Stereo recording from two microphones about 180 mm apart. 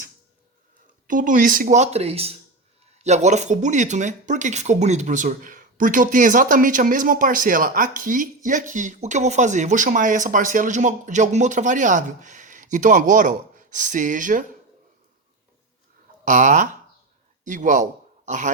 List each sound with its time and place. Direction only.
1.0 s speech: 45° right (ahead or behind)
16.2 s a man's voice: 45° right (ahead or behind)